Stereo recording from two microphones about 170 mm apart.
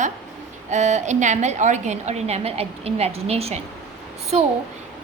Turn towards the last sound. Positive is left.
turn(degrees=-40)  # may be behind; listen again after turning